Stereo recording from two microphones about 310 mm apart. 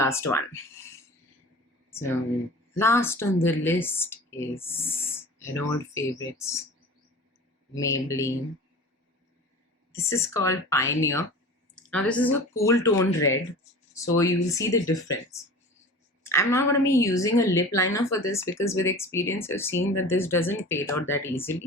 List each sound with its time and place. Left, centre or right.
0.0 s speech: centre
1.9 s speech: centre
7.8 s speech: centre
9.9 s speech: centre
19.7 s speech: left
20.1 s speech: centre